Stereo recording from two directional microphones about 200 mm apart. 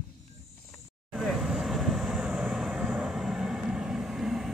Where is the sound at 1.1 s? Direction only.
Centre (ahead or behind).